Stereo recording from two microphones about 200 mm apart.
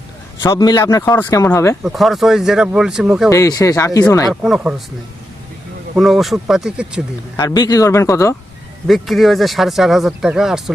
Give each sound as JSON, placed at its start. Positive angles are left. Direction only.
{"t": 0.4, "sound": "speech", "side_deg": 20}
{"t": 1.8, "sound": "speech", "side_deg": 0}
{"t": 3.2, "sound": "speech", "side_deg": 15}
{"t": 4.3, "sound": "speech", "side_deg": 0}
{"t": 6.0, "sound": "speech", "side_deg": 0}
{"t": 7.3, "sound": "speech", "side_deg": 20}
{"t": 8.9, "sound": "speech", "side_deg": 0}